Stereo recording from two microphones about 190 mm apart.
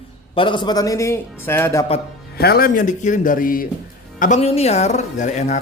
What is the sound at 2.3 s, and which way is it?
A man's voice, 55° left (ahead or behind).